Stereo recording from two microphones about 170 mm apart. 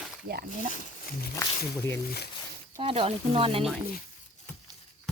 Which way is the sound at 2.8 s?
35° right (ahead or behind).